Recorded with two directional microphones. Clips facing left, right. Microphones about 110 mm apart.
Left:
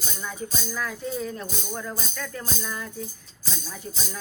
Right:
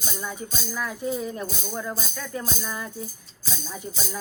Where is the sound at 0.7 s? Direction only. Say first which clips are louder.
Right 4 dB; 10° right (ahead or behind).